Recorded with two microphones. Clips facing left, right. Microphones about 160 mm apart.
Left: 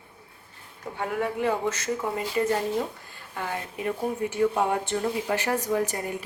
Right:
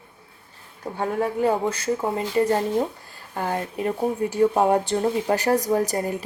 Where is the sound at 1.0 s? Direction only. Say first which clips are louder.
Right 4 dB; 35° right (ahead or behind).